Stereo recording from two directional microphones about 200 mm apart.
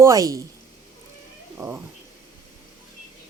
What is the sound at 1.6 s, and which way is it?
Speech, 15° right (ahead or behind).